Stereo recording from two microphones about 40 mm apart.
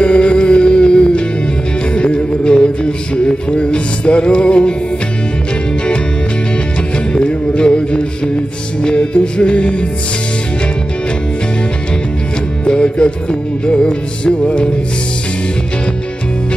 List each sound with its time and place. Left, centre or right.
0.0 s music: left
7.2 s music: left
12.6 s music: left